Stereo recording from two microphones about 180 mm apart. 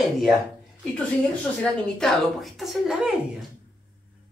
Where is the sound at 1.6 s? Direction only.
5° left (ahead or behind).